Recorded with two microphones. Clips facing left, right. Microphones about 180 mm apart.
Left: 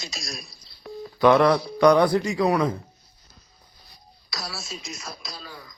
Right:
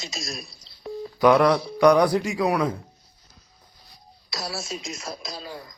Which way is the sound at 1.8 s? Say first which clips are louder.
Even; 10° right (ahead or behind).